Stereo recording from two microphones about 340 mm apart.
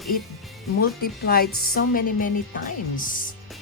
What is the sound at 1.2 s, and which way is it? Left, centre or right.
Speech, left.